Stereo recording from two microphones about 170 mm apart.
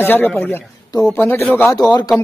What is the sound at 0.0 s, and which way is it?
A man's voice, 10° left (ahead or behind).